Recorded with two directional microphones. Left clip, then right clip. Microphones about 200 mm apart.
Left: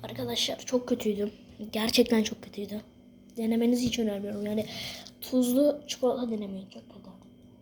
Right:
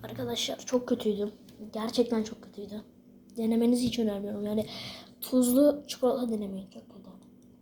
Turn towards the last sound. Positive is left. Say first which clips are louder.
# right 1 dB
turn(degrees=-5)  # may be behind; listen again after turning